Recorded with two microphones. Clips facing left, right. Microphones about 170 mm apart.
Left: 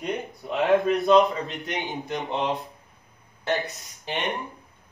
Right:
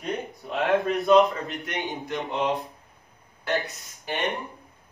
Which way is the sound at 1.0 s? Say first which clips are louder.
Right 2 dB; centre (ahead or behind).